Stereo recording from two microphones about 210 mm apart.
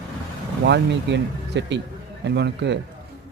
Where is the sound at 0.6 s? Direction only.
55° right (ahead or behind).